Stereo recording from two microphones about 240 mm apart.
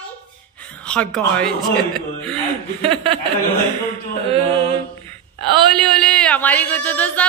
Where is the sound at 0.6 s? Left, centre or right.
Centre.